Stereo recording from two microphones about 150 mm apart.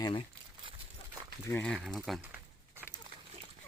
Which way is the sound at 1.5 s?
10° left (ahead or behind).